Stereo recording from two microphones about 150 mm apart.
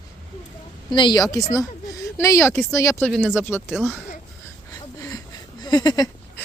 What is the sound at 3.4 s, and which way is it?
Speech, 15° left (ahead or behind).